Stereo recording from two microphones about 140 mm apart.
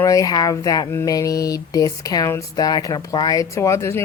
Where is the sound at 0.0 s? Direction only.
25° left (ahead or behind).